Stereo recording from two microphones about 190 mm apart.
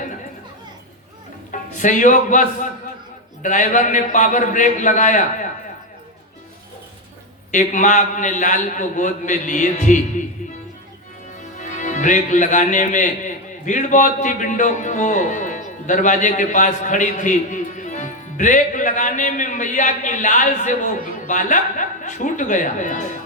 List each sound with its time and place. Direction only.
1.5 s a man's voice: 40° left (ahead or behind)
7.5 s a man's voice: 40° left (ahead or behind)
11.5 s a man's voice: 40° left (ahead or behind)